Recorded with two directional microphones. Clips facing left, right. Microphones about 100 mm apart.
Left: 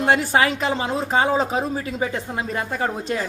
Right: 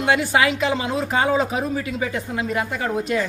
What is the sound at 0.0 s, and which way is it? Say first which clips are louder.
A woman's voice: even; 35° left (ahead or behind).